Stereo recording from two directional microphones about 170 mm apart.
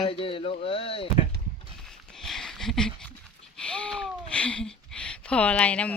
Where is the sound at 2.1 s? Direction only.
Centre (ahead or behind).